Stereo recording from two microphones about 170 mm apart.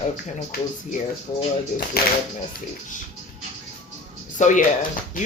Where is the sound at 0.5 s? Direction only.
65° left (ahead or behind).